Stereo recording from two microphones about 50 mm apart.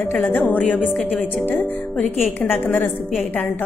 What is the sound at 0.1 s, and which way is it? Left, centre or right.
Speech, left.